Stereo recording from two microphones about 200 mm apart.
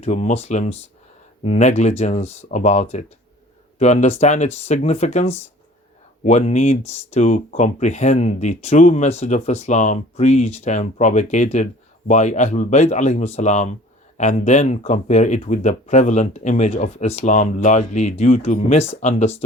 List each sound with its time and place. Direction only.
0.0 s speech: 35° left (ahead or behind)